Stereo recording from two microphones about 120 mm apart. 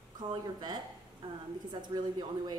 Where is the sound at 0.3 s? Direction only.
40° right (ahead or behind).